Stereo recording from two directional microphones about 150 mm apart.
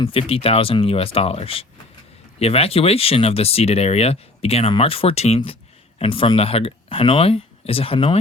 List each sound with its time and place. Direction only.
0.0 s speech: 40° left (ahead or behind)